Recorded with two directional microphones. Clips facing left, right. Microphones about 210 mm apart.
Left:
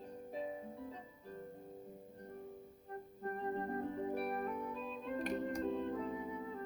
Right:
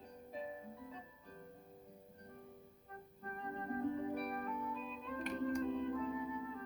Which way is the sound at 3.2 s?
35° left (ahead or behind).